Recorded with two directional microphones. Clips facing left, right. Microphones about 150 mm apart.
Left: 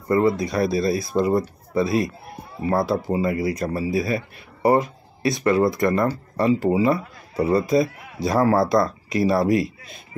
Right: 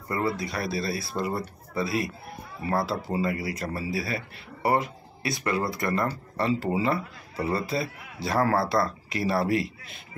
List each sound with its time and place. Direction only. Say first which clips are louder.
0.1 s speech: left 9 dB; 20° left (ahead or behind)